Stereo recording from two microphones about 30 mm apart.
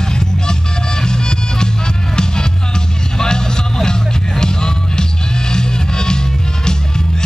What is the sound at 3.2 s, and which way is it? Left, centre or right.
Vehicle, left.